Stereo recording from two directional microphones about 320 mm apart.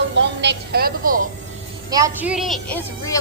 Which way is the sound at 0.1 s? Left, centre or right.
Right.